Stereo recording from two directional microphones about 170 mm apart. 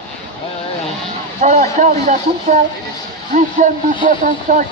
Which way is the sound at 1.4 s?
50° right (ahead or behind).